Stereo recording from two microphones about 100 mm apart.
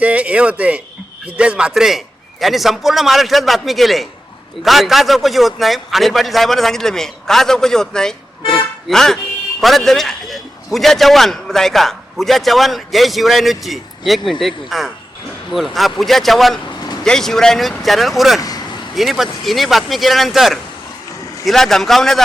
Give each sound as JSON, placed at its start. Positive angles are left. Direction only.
{"t": 0.0, "sound": "a man's voice", "side_deg": -15}
{"t": 16.6, "sound": "vehicle", "side_deg": 45}
{"t": 17.0, "sound": "a man's voice", "side_deg": 5}
{"t": 18.3, "sound": "speech", "side_deg": 40}
{"t": 18.9, "sound": "a man's voice", "side_deg": 0}